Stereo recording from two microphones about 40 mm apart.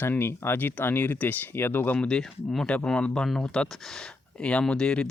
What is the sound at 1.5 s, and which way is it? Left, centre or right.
Speech, left.